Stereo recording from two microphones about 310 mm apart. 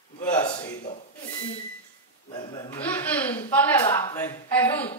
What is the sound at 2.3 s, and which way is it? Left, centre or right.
Speech, centre.